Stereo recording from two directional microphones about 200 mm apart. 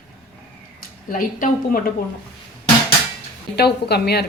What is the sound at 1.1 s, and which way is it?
Speech, 40° left (ahead or behind).